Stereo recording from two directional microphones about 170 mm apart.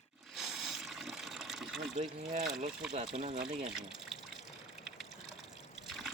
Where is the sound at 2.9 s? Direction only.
40° right (ahead or behind).